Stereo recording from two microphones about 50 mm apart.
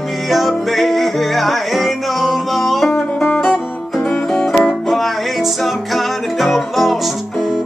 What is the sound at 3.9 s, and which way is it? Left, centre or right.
Music, centre.